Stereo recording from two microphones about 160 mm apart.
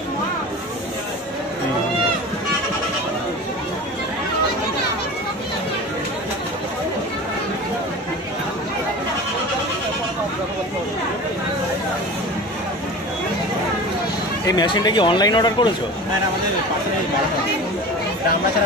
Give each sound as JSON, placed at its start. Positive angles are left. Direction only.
{"t": 14.4, "sound": "speech", "side_deg": 25}